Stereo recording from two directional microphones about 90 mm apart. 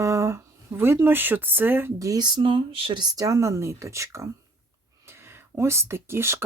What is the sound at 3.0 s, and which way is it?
Speech, 45° right (ahead or behind).